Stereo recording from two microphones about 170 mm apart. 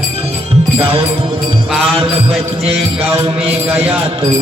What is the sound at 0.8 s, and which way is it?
Music, 35° right (ahead or behind).